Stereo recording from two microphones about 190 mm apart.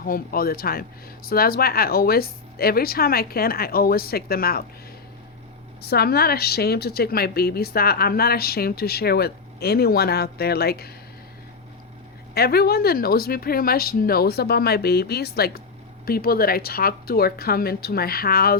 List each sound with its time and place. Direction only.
0.0 s speech: 50° left (ahead or behind)
5.8 s speech: 55° left (ahead or behind)
12.3 s speech: 55° left (ahead or behind)